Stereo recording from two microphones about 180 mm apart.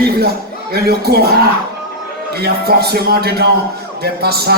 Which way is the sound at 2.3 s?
60° right (ahead or behind).